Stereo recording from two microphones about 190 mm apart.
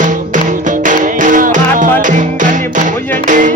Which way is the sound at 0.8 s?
40° right (ahead or behind).